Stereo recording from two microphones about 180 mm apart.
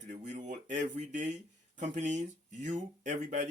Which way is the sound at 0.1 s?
40° right (ahead or behind).